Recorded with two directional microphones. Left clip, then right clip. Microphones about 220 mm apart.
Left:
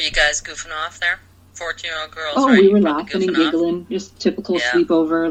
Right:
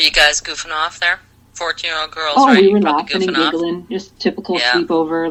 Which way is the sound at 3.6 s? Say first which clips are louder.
Even; 45° right (ahead or behind).